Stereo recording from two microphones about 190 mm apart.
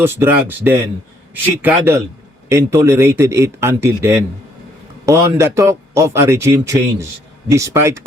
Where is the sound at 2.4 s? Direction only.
15° right (ahead or behind).